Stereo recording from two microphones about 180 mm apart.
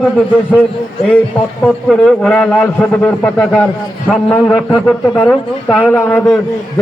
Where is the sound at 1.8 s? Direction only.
5° left (ahead or behind).